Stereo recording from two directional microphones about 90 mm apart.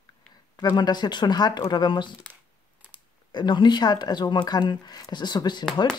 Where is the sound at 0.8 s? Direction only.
55° left (ahead or behind).